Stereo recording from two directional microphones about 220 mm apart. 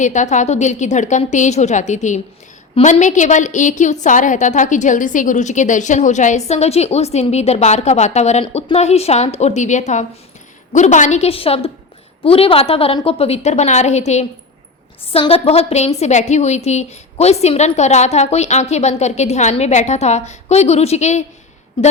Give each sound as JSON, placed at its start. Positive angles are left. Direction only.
{"t": 0.0, "sound": "a woman's voice", "side_deg": 35}